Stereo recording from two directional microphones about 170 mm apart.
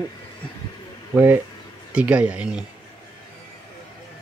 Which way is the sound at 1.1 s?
10° right (ahead or behind).